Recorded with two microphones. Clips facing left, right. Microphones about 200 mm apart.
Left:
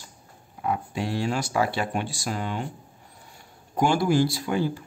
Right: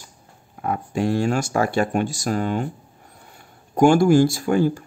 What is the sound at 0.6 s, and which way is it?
Speech, 50° right (ahead or behind).